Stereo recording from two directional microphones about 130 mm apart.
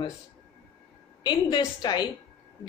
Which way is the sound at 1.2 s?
35° left (ahead or behind).